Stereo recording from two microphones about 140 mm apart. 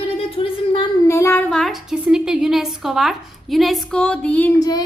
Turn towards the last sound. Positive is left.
turn(degrees=25)  # may be behind; listen again after turning